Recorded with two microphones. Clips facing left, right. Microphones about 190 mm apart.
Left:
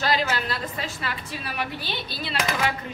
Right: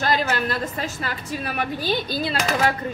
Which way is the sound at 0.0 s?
50° right (ahead or behind).